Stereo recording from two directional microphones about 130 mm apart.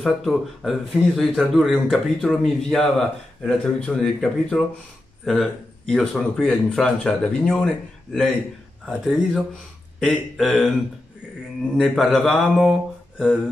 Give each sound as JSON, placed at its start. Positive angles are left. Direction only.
{"t": 0.0, "sound": "a man's voice", "side_deg": 0}
{"t": 11.7, "sound": "a man's voice", "side_deg": 0}